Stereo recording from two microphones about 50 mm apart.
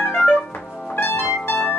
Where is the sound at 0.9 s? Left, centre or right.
Left.